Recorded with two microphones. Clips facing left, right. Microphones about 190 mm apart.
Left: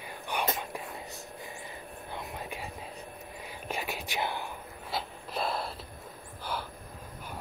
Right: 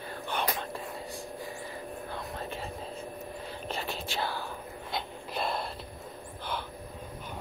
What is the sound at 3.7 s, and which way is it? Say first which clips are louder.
Whispering: left 1 dB; 15° left (ahead or behind).